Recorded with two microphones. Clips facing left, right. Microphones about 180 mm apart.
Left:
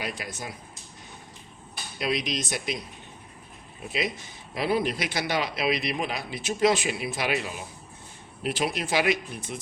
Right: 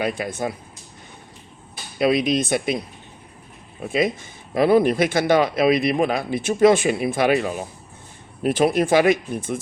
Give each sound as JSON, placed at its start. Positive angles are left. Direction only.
{"t": 0.0, "sound": "speech", "side_deg": -55}
{"t": 2.0, "sound": "speech", "side_deg": -55}
{"t": 3.8, "sound": "speech", "side_deg": -50}